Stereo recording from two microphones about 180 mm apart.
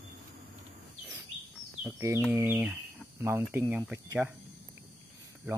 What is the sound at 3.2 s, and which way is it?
Speech, 15° right (ahead or behind).